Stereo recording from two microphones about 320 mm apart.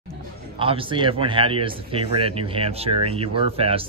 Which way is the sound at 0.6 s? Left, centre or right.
Centre.